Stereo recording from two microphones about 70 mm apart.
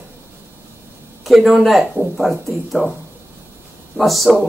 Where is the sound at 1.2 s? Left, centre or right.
Centre.